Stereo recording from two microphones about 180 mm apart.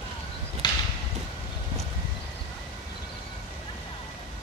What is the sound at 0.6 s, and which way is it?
Clip-clop, 25° left (ahead or behind).